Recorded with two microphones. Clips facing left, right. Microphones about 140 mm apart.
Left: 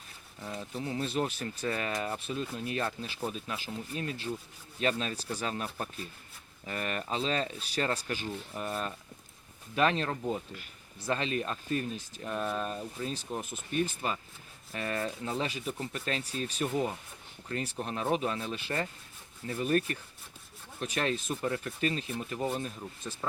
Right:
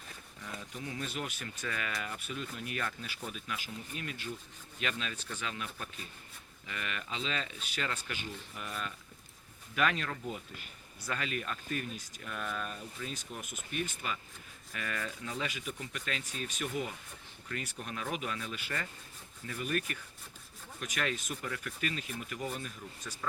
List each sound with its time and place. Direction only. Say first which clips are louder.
0.4 s speech: left 6 dB; 30° left (ahead or behind)